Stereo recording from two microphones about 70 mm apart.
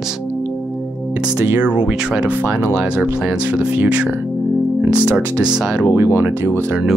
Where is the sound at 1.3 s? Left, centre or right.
Right.